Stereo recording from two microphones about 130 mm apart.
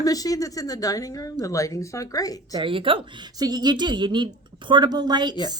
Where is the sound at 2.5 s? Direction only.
40° right (ahead or behind).